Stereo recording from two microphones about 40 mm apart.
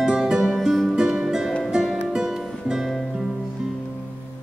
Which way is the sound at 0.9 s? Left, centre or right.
Centre.